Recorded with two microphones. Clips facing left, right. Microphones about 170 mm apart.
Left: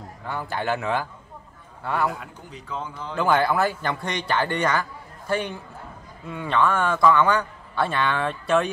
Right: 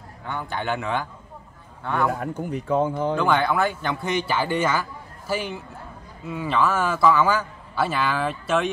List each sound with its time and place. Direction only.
0.3 s speech: 5° left (ahead or behind)
2.1 s speech: 50° right (ahead or behind)
3.2 s speech: 5° left (ahead or behind)